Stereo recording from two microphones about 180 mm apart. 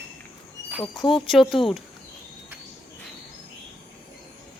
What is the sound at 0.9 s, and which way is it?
Speech, 25° left (ahead or behind).